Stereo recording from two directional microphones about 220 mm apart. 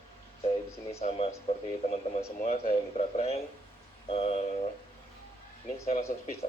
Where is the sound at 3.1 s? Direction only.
30° left (ahead or behind).